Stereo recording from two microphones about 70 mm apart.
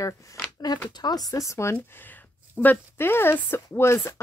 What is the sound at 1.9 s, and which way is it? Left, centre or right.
Speech, left.